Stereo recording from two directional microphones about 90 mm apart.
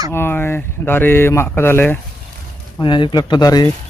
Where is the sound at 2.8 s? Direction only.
60° left (ahead or behind).